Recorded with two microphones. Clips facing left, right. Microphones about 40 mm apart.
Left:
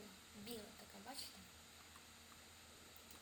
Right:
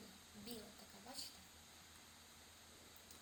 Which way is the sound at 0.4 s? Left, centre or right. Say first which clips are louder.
Left 1 dB; left.